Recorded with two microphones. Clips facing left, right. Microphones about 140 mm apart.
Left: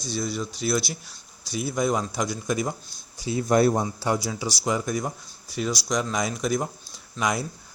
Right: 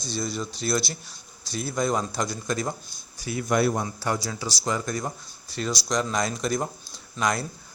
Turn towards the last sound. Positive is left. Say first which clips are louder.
# even
turn(degrees=10)  # may be behind; listen again after turning